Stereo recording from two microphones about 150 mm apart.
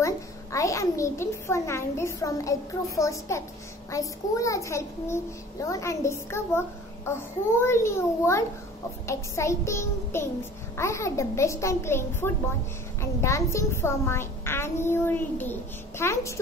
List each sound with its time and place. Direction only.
0.0 s a child's voice: 20° left (ahead or behind)
7.6 s a child's voice: 20° left (ahead or behind)